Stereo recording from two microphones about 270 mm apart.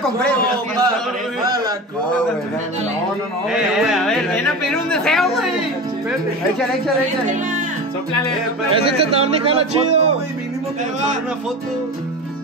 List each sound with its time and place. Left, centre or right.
3.5 s speech: centre
8.6 s a man's voice: right